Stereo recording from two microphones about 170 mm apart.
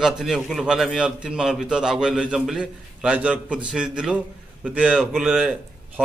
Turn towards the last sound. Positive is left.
turn(degrees=-5)  # may be behind; listen again after turning